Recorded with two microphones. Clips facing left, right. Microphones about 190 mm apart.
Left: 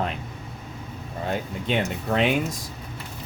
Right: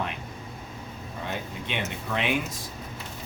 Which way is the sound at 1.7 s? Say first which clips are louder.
Left 7 dB; 35° left (ahead or behind).